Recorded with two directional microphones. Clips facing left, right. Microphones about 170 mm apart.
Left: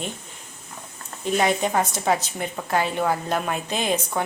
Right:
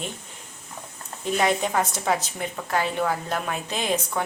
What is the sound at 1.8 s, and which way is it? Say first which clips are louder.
A woman's voice: left 2 dB; centre (ahead or behind).